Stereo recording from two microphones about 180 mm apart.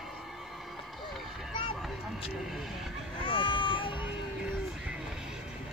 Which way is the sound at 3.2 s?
25° left (ahead or behind).